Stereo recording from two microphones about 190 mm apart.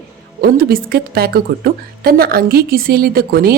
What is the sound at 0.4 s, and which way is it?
A woman's voice, 50° right (ahead or behind).